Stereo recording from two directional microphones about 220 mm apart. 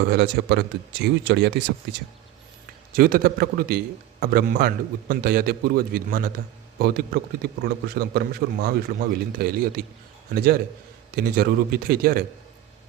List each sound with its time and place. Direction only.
0.0 s a man's voice: 50° right (ahead or behind)